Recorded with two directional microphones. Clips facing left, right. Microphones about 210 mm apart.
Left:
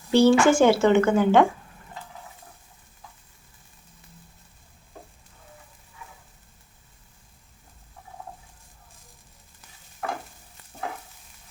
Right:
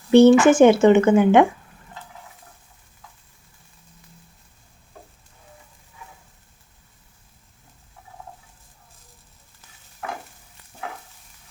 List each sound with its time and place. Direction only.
0.1 s a woman's voice: 20° right (ahead or behind)